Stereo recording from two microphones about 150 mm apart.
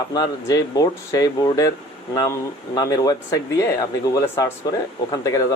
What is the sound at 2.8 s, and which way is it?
Speech, 25° left (ahead or behind).